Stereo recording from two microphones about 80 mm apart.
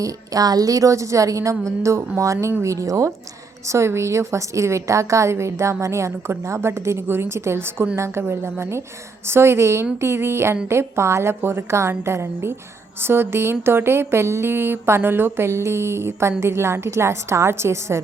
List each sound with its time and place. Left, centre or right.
0.0 s a woman's voice: right